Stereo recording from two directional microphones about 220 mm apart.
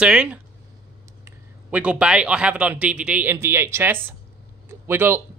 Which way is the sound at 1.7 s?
5° right (ahead or behind).